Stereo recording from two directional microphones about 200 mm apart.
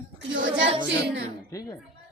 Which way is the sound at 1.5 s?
15° left (ahead or behind).